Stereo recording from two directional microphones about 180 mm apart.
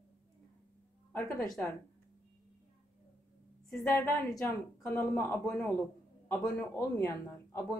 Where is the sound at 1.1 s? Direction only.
15° left (ahead or behind).